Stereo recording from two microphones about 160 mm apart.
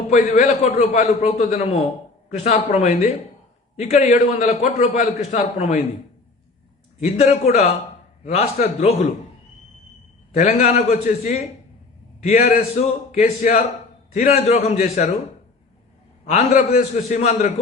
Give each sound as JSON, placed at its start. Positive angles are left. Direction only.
{"t": 0.1, "sound": "a man's voice", "side_deg": 45}
{"t": 7.0, "sound": "a man's voice", "side_deg": 45}
{"t": 10.5, "sound": "a man's voice", "side_deg": 45}
{"t": 16.3, "sound": "a man's voice", "side_deg": 50}